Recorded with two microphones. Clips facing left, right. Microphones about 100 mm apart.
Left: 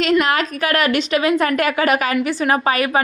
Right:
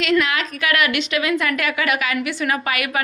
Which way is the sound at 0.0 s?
40° left (ahead or behind).